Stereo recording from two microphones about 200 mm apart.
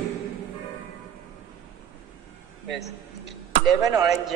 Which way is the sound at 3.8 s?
15° right (ahead or behind).